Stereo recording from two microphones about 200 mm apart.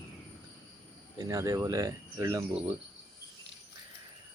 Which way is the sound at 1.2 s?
15° right (ahead or behind).